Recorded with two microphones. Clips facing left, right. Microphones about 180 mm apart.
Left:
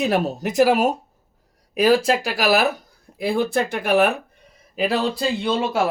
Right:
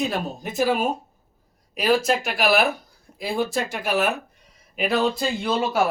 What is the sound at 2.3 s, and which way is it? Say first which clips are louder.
Speech: left 1 dB; 40° left (ahead or behind).